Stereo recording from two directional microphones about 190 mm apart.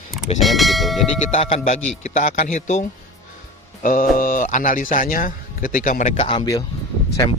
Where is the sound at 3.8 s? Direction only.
45° left (ahead or behind).